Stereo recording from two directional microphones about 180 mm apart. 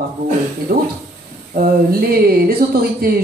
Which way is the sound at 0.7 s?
55° right (ahead or behind).